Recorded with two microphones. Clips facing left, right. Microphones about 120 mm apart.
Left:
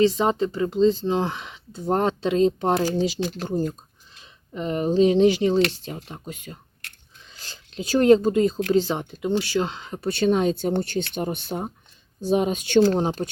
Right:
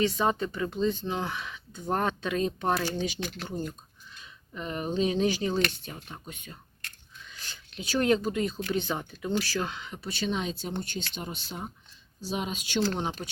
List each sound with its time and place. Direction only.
0.0 s speech: 25° left (ahead or behind)
7.2 s whispering: 30° left (ahead or behind)
7.8 s speech: 35° left (ahead or behind)
10.0 s speech: 55° left (ahead or behind)
12.8 s speech: 30° left (ahead or behind)